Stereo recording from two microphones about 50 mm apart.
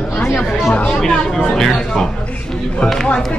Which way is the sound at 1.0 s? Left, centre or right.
Centre.